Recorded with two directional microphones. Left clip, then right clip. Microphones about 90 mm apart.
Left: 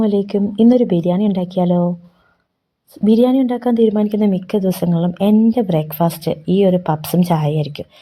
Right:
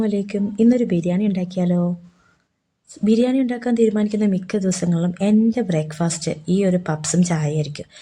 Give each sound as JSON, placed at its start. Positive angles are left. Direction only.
{"t": 0.0, "sound": "speech", "side_deg": 30}
{"t": 2.9, "sound": "a woman's voice", "side_deg": 30}